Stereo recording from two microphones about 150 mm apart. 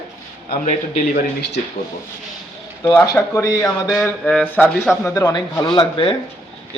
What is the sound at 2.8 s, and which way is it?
Speech, 10° left (ahead or behind).